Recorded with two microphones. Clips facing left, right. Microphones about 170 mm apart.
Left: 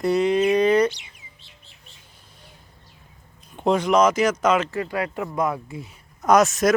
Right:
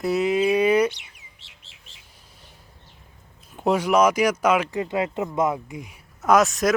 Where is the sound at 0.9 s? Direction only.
65° right (ahead or behind); by 1.9 s 90° right.